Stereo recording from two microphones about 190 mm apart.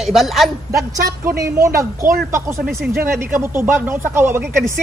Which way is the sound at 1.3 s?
15° right (ahead or behind).